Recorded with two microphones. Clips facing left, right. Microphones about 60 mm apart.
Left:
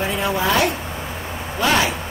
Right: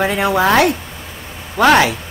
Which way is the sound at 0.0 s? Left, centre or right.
Right.